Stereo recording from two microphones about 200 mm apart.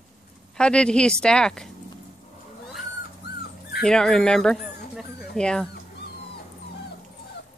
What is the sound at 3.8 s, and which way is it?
Speech, 5° left (ahead or behind).